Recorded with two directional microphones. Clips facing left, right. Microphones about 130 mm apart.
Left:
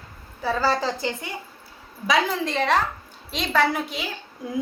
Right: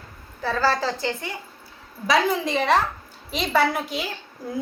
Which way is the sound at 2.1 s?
10° right (ahead or behind).